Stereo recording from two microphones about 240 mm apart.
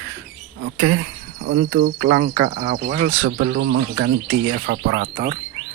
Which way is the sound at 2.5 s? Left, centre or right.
Right.